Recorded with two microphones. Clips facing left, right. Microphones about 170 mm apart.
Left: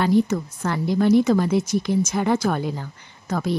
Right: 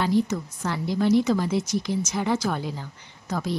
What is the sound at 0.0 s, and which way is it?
A woman's voice, 55° left (ahead or behind).